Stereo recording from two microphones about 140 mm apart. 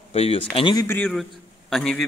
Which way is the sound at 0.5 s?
35° left (ahead or behind).